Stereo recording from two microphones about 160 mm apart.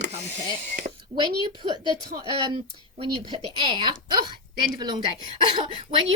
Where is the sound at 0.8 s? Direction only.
45° right (ahead or behind).